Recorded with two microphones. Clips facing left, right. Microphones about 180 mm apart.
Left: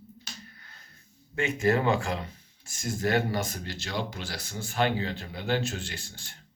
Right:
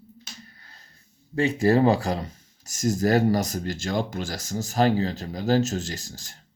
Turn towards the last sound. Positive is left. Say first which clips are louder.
# right 6 dB
turn(degrees=-40)  # may be behind; listen again after turning